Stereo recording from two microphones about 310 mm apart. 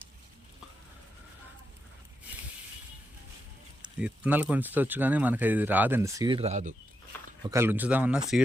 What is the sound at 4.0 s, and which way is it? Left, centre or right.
Speech, centre.